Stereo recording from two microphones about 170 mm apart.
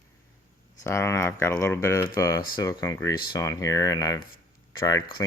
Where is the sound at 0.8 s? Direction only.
15° left (ahead or behind).